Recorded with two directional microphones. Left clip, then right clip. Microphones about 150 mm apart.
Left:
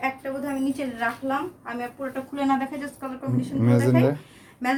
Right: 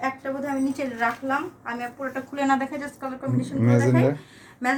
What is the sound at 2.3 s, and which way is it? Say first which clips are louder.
Speech: right 2 dB; 5° right (ahead or behind).